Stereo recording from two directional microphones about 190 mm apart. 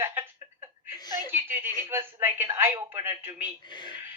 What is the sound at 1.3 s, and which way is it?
Speech, 10° right (ahead or behind).